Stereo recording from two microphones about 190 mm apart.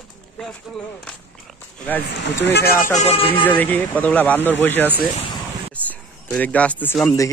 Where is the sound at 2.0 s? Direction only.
65° left (ahead or behind).